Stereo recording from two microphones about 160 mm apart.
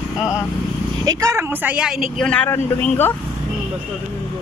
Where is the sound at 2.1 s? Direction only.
5° left (ahead or behind).